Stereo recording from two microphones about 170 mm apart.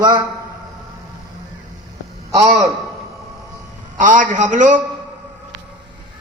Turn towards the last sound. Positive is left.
turn(degrees=-45)  # may be behind; listen again after turning